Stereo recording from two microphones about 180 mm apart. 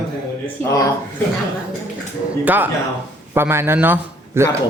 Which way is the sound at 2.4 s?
10° right (ahead or behind).